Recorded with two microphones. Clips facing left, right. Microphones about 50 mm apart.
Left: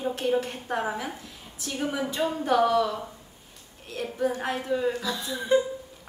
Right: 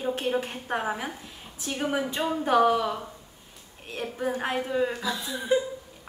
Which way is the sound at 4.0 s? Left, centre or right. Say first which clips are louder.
Left 1 dB; right.